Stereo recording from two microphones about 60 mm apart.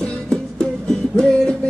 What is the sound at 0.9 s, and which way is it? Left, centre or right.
Music, centre.